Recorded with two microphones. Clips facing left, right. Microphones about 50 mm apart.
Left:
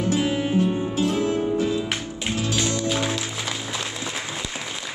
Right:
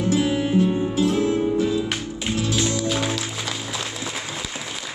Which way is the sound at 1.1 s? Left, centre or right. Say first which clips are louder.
Right 2 dB; left.